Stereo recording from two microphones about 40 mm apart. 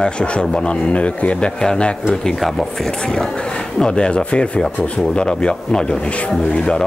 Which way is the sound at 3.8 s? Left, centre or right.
Centre.